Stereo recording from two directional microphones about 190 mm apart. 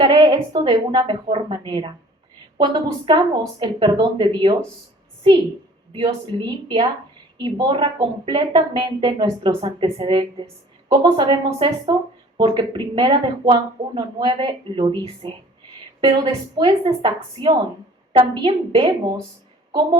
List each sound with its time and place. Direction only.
0.0 s speech: 25° right (ahead or behind)
6.3 s speech: 25° right (ahead or behind)